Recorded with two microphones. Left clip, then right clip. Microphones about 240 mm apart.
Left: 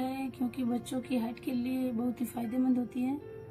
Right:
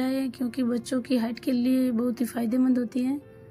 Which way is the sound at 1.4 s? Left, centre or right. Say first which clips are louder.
Right 9 dB; right.